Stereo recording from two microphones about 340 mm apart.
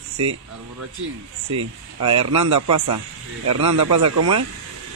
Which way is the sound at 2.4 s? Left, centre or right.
Right.